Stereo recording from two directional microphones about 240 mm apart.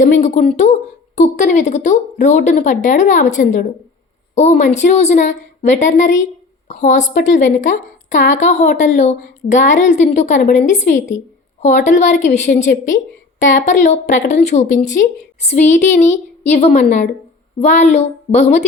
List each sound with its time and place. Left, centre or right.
0.0 s a woman's voice: left